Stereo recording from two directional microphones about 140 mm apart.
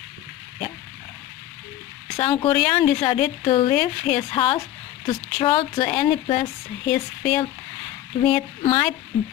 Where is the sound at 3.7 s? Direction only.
5° left (ahead or behind).